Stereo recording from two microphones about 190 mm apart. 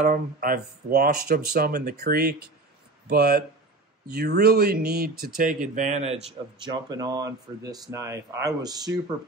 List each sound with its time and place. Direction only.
0.0 s speech: 45° right (ahead or behind)
6.7 s speech: 20° right (ahead or behind)